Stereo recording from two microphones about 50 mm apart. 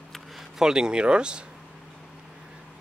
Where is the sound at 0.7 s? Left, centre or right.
Centre.